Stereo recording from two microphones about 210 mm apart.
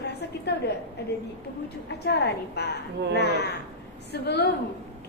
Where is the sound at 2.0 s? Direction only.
55° left (ahead or behind).